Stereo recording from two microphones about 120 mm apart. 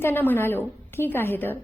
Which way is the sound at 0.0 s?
15° left (ahead or behind).